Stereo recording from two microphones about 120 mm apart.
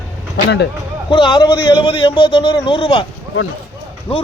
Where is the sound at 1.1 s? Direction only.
40° left (ahead or behind).